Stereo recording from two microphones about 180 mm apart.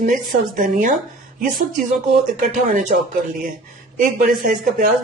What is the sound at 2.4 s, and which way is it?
Speech, 50° right (ahead or behind).